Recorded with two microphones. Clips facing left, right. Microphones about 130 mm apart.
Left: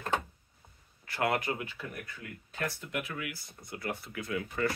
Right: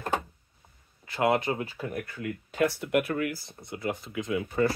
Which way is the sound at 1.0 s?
20° right (ahead or behind).